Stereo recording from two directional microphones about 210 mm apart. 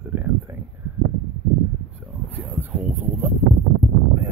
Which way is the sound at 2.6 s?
10° right (ahead or behind).